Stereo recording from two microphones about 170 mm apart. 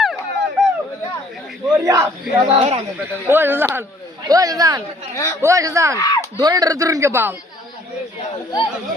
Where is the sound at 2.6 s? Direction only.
35° right (ahead or behind).